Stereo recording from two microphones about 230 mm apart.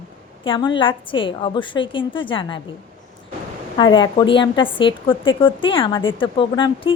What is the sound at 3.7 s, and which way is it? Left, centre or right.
A woman's voice, centre.